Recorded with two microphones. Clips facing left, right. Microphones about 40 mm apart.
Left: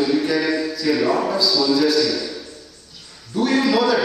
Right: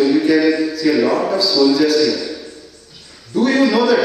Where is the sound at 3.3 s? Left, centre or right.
Centre.